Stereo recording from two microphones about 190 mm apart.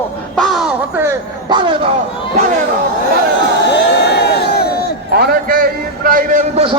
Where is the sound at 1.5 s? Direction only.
25° right (ahead or behind).